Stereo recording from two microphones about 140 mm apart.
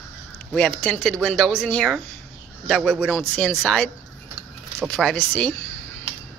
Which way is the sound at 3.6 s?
5° left (ahead or behind).